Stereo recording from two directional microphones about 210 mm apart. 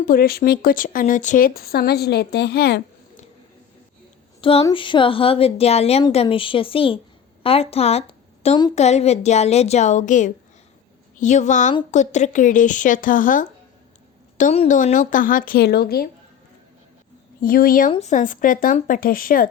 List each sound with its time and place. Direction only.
0.0 s speech: 45° left (ahead or behind)
4.4 s a woman's voice: 25° left (ahead or behind); by 16.0 s 50° left (ahead or behind)
17.4 s speech: 45° left (ahead or behind)